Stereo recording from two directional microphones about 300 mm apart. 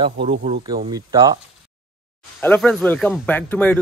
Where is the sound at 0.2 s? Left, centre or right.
Right.